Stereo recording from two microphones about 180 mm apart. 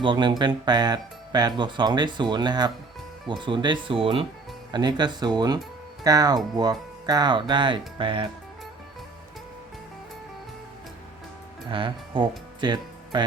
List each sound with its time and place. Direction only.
0.0 s speech: 25° right (ahead or behind)
11.7 s speech: 25° right (ahead or behind)
12.5 s music: 25° right (ahead or behind)